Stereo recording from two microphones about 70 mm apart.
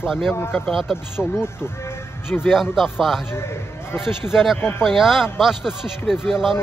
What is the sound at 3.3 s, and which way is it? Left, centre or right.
Speech, left.